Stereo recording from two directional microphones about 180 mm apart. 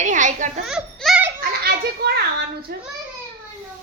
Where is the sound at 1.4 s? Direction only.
65° right (ahead or behind).